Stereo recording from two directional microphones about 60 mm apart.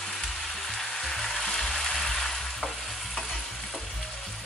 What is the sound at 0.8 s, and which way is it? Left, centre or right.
Music, centre.